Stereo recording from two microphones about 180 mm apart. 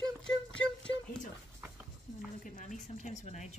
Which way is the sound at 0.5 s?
5° left (ahead or behind).